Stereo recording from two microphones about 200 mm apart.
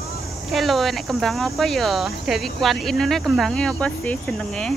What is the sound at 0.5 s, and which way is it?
Speech, centre (ahead or behind).